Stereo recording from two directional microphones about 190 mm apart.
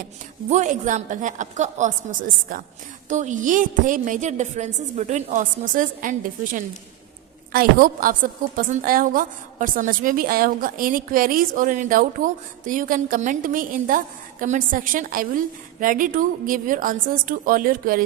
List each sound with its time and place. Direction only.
0.5 s a woman's voice: 40° right (ahead or behind)